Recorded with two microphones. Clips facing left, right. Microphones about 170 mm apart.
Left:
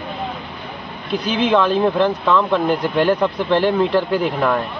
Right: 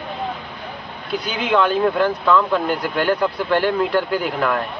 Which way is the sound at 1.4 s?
20° left (ahead or behind).